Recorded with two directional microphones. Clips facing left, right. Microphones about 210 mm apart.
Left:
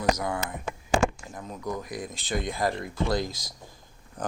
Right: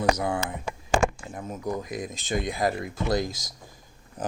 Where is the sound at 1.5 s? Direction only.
20° right (ahead or behind).